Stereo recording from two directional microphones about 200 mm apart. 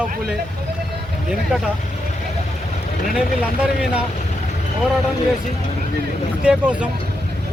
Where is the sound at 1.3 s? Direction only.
5° right (ahead or behind).